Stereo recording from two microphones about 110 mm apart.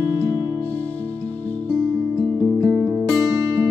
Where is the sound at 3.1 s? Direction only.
30° right (ahead or behind).